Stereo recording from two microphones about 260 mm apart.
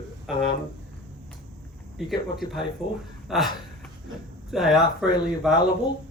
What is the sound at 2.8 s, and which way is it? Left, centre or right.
Speech, left.